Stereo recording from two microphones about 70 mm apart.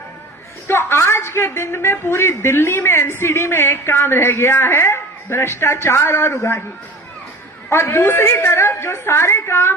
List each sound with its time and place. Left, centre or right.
0.7 s a woman's voice: left
7.7 s a woman's voice: left